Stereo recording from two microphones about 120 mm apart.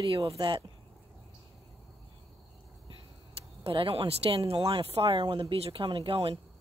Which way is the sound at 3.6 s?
50° right (ahead or behind).